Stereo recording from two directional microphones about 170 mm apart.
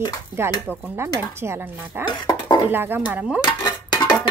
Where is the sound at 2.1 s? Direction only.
25° left (ahead or behind).